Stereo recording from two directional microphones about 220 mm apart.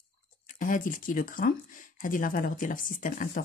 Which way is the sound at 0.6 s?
40° left (ahead or behind).